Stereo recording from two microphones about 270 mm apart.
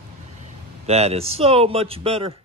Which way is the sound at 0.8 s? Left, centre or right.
Right.